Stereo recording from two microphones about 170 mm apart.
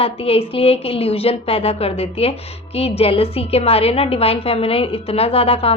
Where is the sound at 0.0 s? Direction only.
35° left (ahead or behind).